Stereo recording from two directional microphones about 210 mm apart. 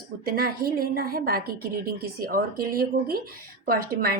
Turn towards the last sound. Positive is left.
turn(degrees=-45)  # may be behind; listen again after turning